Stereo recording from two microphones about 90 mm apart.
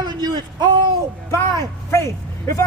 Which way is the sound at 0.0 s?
50° right (ahead or behind).